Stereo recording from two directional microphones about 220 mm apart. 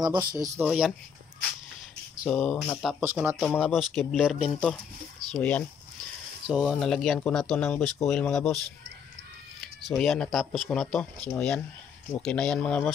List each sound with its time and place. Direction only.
0.0 s speech: 20° right (ahead or behind)
0.7 s speech: centre (ahead or behind)
2.2 s speech: 5° left (ahead or behind)
9.6 s speech: centre (ahead or behind)